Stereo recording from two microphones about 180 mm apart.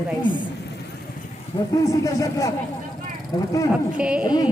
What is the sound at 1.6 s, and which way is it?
Speech, 20° left (ahead or behind).